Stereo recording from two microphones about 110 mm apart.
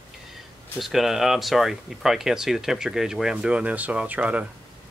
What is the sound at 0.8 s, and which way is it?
Speech, centre (ahead or behind).